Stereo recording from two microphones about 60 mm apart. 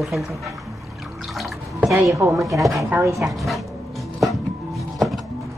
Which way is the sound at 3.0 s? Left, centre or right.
Right.